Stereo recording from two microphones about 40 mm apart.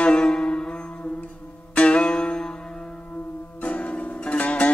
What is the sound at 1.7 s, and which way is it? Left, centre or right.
Music, left.